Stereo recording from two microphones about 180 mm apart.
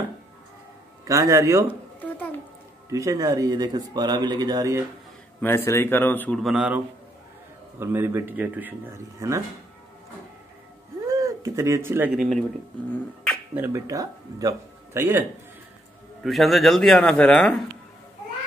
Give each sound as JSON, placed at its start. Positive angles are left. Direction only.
{"t": 1.0, "sound": "a man's voice", "side_deg": -15}
{"t": 2.9, "sound": "speech", "side_deg": -20}
{"t": 5.4, "sound": "speech", "side_deg": 15}
{"t": 7.8, "sound": "a man's voice", "side_deg": -15}
{"t": 11.1, "sound": "speech", "side_deg": -20}
{"t": 12.2, "sound": "a man's voice", "side_deg": 5}
{"t": 13.6, "sound": "a man's voice", "side_deg": -20}
{"t": 16.2, "sound": "a man's voice", "side_deg": 0}